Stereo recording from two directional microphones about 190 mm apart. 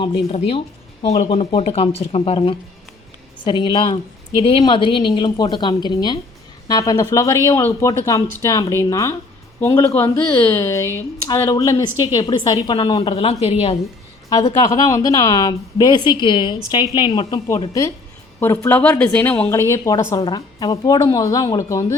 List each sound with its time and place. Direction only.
0.0 s a woman's voice: 30° left (ahead or behind)
14.6 s a woman's voice: 15° left (ahead or behind)